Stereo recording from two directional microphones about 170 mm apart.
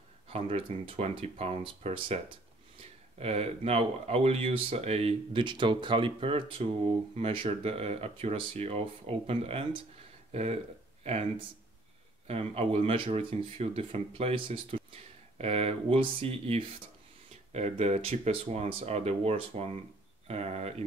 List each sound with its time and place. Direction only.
0.3 s speech: 35° right (ahead or behind)